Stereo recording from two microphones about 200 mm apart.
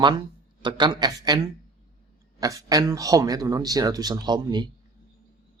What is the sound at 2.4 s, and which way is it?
Speech, 15° right (ahead or behind).